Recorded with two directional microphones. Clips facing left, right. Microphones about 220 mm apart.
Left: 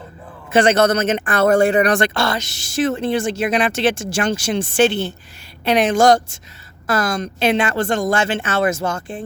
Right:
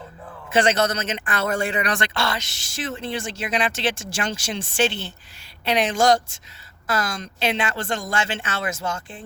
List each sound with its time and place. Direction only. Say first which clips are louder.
0.5 s speech: left 6 dB; 55° left (ahead or behind)